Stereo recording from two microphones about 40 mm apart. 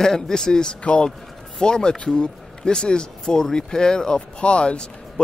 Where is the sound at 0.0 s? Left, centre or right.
Centre.